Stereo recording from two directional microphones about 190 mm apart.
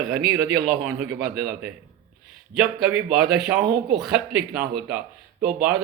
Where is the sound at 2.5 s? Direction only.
5° right (ahead or behind).